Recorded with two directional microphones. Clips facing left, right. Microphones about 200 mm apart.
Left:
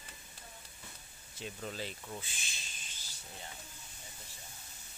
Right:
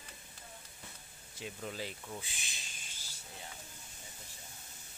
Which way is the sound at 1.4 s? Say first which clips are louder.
Even; 10° right (ahead or behind).